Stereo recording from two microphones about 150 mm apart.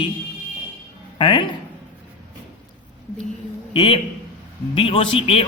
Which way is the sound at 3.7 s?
35° left (ahead or behind).